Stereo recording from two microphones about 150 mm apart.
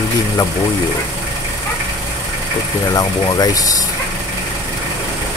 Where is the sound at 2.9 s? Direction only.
25° left (ahead or behind).